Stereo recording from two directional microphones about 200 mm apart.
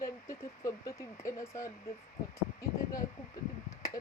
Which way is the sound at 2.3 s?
15° left (ahead or behind).